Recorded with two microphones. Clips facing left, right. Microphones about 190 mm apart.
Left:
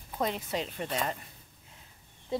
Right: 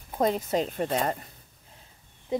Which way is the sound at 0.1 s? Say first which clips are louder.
Right 7 dB; 40° right (ahead or behind).